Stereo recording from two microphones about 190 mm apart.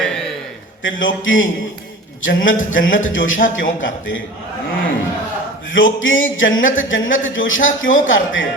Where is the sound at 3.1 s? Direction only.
90° left.